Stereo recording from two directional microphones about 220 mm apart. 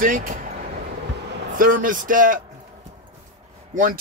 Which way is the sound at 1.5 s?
40° right (ahead or behind).